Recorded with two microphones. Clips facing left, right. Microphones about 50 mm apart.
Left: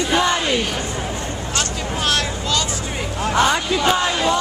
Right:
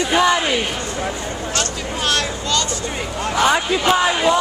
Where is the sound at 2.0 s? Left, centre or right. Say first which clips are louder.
Right 1 dB; centre.